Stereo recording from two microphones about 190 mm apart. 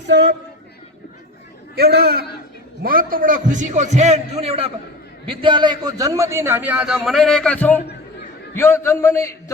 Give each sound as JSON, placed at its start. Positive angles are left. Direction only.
{"t": 0.1, "sound": "a man's voice", "side_deg": -65}
{"t": 1.7, "sound": "a man's voice", "side_deg": -55}